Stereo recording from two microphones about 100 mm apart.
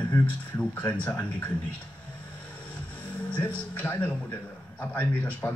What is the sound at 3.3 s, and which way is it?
A man's voice, 15° left (ahead or behind).